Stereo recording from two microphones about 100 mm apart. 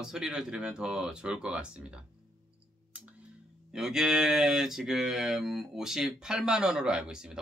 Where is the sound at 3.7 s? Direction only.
5° right (ahead or behind).